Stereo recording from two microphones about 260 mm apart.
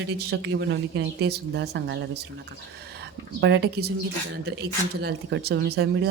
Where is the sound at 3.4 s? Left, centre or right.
Right.